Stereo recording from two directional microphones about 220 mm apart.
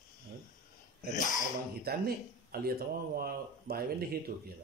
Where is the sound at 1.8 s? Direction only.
45° right (ahead or behind).